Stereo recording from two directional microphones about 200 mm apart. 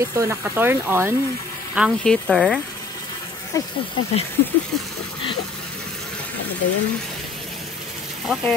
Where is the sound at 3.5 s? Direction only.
15° left (ahead or behind).